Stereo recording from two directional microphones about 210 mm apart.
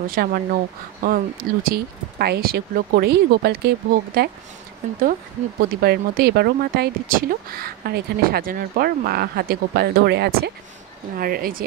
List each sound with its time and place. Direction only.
0.0 s speech: 45° right (ahead or behind)
5.8 s speech: 50° right (ahead or behind)